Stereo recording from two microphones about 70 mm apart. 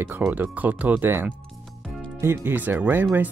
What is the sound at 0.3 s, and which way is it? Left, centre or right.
Speech, right.